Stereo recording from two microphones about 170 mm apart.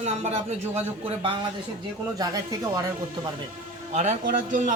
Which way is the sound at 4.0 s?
45° right (ahead or behind).